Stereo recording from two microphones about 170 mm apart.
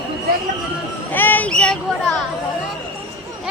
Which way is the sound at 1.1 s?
10° left (ahead or behind).